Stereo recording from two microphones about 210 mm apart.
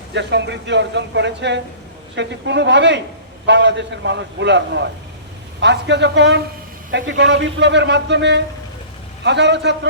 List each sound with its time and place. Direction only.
0.1 s a man's voice: 55° right (ahead or behind)